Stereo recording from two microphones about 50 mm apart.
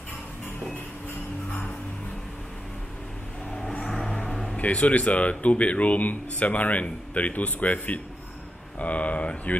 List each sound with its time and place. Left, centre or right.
3.9 s vehicle: centre
4.2 s a sound: centre
4.6 s speech: left